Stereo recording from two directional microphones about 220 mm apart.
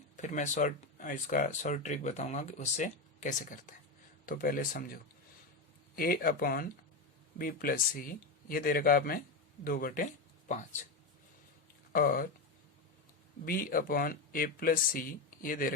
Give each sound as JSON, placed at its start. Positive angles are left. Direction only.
{"t": 0.2, "sound": "speech", "side_deg": 35}
{"t": 6.0, "sound": "speech", "side_deg": 40}
{"t": 11.9, "sound": "speech", "side_deg": 40}
{"t": 13.4, "sound": "speech", "side_deg": 40}